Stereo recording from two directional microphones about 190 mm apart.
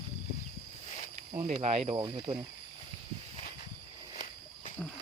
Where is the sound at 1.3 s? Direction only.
35° right (ahead or behind).